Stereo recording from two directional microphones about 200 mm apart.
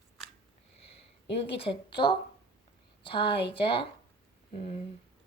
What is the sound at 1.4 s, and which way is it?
A woman's voice, 25° left (ahead or behind).